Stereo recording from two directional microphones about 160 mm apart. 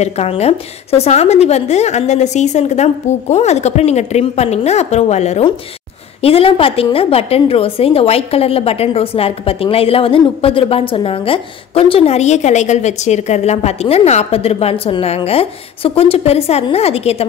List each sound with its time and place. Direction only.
0.0 s a woman's voice: 40° left (ahead or behind)